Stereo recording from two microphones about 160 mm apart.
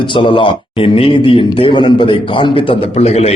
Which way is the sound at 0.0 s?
30° left (ahead or behind).